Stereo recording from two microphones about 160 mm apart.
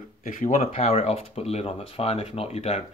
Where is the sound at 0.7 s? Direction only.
40° left (ahead or behind).